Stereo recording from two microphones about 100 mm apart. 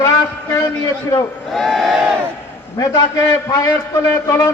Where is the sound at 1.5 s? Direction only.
Centre (ahead or behind).